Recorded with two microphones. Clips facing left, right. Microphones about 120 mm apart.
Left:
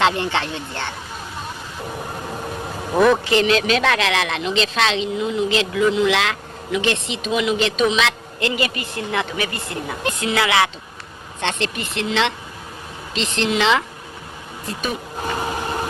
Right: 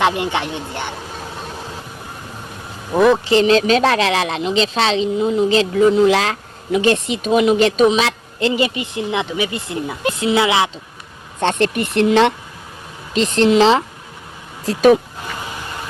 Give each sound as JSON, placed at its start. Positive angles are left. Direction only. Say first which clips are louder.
{"t": 0.0, "sound": "speech", "louder": "right 1 dB", "side_deg": -15}
{"t": 2.9, "sound": "speech", "louder": "right 2 dB", "side_deg": -5}
{"t": 3.2, "sound": "a woman's voice", "louder": "right 4 dB", "side_deg": -30}
{"t": 11.3, "sound": "a woman's voice", "louder": "right 7 dB", "side_deg": -45}
{"t": 14.7, "sound": "speech", "louder": "right 15 dB", "side_deg": -90}
{"t": 15.2, "sound": "a sound", "louder": "left 5 dB", "side_deg": 45}